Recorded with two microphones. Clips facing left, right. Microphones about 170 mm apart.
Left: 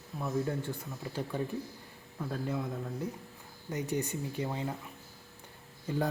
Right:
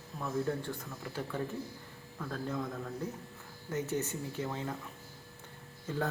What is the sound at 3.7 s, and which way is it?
A man's voice, 15° left (ahead or behind).